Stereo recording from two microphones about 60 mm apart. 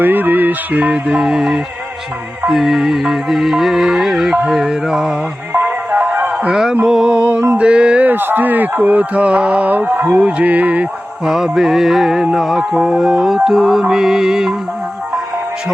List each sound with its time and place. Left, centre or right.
0.0 s music: right
1.0 s music: centre
2.5 s mantra: centre
4.4 s music: centre
5.5 s music: right
6.5 s music: centre
6.8 s mantra: centre
7.1 s speech: right
8.0 s speech: right
11.3 s mantra: centre